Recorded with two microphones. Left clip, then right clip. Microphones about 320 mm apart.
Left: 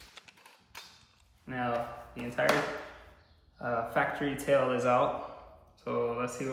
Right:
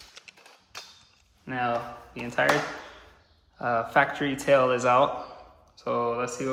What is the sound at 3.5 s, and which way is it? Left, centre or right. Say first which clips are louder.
A man's voice: right 7 dB; right.